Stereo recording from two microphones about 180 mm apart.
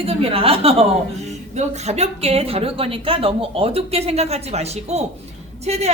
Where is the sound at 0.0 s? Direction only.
30° right (ahead or behind).